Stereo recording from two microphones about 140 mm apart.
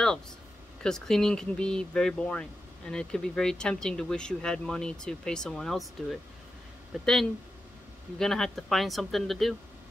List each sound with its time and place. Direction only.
0.8 s speech: 5° left (ahead or behind)
8.2 s speech: centre (ahead or behind)